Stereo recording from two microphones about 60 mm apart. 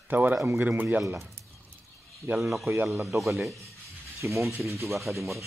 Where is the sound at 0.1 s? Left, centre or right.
Right.